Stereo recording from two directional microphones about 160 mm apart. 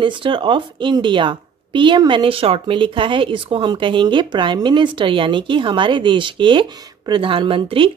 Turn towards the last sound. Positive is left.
turn(degrees=-35)  # may be behind; listen again after turning